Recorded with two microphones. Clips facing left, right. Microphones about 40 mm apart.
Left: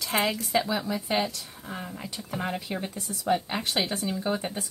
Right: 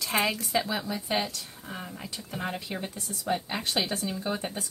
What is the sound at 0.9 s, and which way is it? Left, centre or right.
Speech, centre.